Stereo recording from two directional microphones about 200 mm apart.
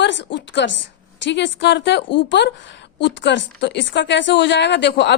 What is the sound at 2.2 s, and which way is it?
A woman's voice, 60° left (ahead or behind).